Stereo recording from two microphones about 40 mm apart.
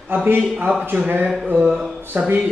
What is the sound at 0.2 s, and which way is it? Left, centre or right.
Speech, right.